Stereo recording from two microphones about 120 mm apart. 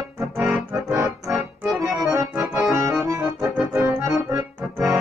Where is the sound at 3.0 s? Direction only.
25° right (ahead or behind).